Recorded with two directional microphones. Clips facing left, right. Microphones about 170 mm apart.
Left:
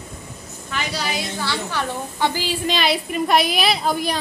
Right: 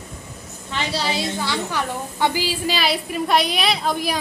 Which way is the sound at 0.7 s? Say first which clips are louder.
Right 2 dB; 25° right (ahead or behind).